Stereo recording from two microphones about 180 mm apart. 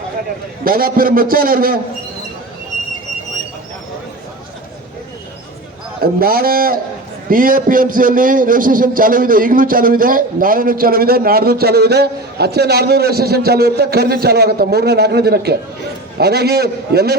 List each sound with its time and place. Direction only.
0.6 s a man's voice: 55° right (ahead or behind)
6.0 s a man's voice: 55° right (ahead or behind)